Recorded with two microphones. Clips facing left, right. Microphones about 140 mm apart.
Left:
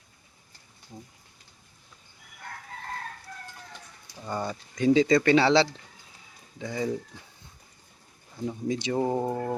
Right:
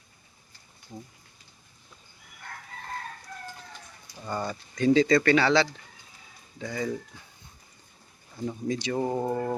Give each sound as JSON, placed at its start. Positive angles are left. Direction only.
{"t": 4.3, "sound": "speech", "side_deg": 15}
{"t": 8.6, "sound": "speech", "side_deg": 15}